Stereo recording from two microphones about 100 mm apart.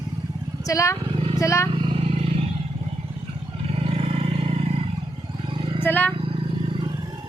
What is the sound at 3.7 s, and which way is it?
Vehicle, 75° right (ahead or behind).